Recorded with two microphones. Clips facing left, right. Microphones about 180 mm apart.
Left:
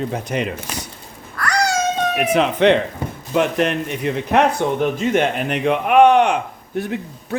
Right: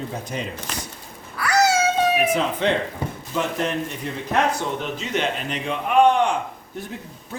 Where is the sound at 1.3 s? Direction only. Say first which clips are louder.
Right 1 dB; 5° right (ahead or behind).